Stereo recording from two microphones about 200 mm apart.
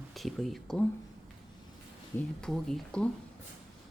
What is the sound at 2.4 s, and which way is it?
Speech, 5° left (ahead or behind).